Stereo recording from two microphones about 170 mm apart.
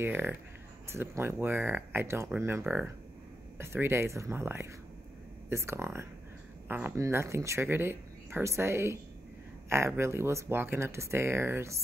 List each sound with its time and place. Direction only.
0.0 s speech: 10° right (ahead or behind)